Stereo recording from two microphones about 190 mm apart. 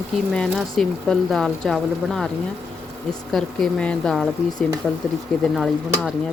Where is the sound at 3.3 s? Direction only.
5° left (ahead or behind).